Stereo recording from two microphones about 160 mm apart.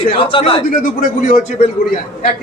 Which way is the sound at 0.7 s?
60° left (ahead or behind).